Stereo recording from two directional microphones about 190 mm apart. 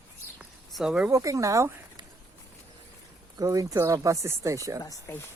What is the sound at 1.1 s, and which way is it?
Speech, 15° right (ahead or behind).